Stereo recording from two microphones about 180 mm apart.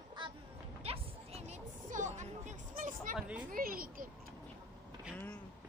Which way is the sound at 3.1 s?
5° right (ahead or behind).